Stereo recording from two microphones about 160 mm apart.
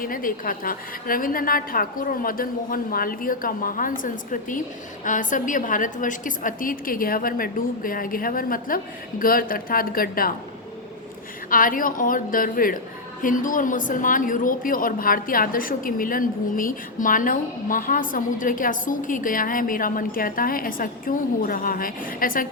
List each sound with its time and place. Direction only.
0.0 s a woman's voice: 60° left (ahead or behind)
11.5 s a woman's voice: 60° left (ahead or behind)